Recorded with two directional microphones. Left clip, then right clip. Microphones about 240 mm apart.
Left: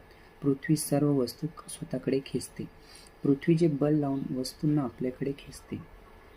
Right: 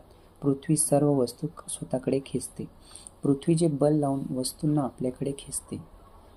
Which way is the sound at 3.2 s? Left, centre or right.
Centre.